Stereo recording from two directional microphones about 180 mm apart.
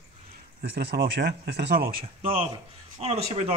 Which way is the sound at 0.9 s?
70° right (ahead or behind).